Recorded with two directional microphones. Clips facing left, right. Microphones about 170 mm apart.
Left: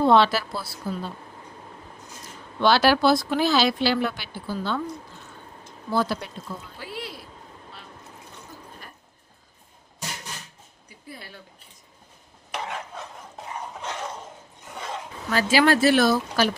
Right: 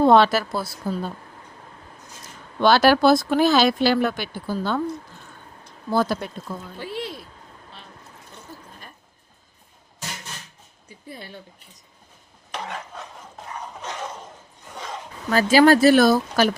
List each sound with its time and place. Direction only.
0.0 s speech: 45° right (ahead or behind)
2.6 s speech: 45° right (ahead or behind)
5.9 s speech: 45° right (ahead or behind)
6.7 s speech: 25° right (ahead or behind)
10.8 s a sound: 25° right (ahead or behind)
15.3 s speech: 45° right (ahead or behind)